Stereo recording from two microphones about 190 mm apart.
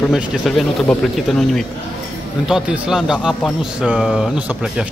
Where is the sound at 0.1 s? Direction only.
Centre (ahead or behind).